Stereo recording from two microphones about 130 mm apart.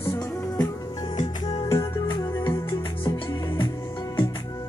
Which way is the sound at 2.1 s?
35° left (ahead or behind).